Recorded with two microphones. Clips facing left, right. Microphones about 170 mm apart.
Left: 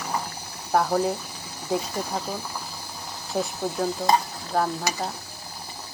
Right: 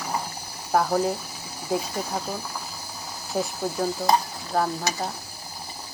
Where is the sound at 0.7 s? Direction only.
Centre (ahead or behind).